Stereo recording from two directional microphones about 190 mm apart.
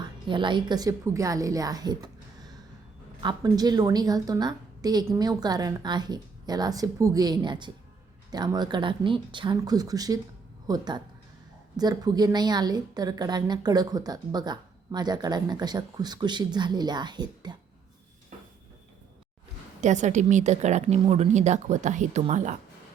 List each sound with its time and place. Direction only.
0.3 s a woman's voice: 25° right (ahead or behind)
19.8 s a woman's voice: 40° right (ahead or behind)